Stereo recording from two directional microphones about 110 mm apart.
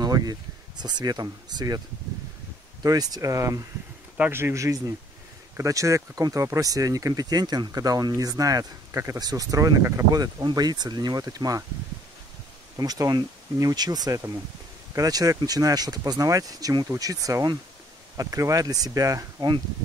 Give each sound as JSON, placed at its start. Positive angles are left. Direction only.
{"t": 0.0, "sound": "speech", "side_deg": -40}
{"t": 2.8, "sound": "speech", "side_deg": -35}
{"t": 12.7, "sound": "speech", "side_deg": -35}